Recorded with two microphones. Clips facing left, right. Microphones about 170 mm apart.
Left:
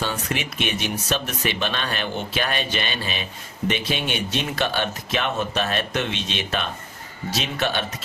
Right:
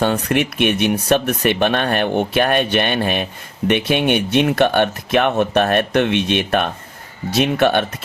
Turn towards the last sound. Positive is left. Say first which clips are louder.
# right 9 dB
turn(degrees=-55)  # may be behind; listen again after turning